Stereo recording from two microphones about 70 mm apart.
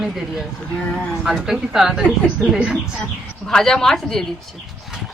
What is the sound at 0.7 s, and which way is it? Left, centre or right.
Speech, centre.